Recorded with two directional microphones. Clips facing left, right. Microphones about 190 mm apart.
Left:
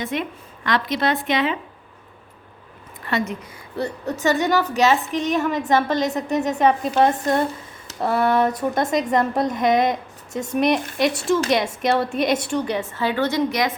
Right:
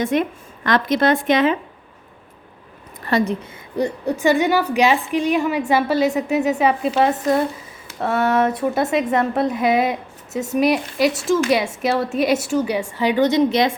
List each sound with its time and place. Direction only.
0.0 s a woman's voice: 45° right (ahead or behind)
3.1 s a woman's voice: 35° right (ahead or behind)
3.8 s a woman's voice: 15° right (ahead or behind)